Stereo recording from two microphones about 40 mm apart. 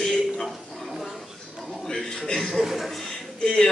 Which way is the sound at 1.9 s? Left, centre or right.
Centre.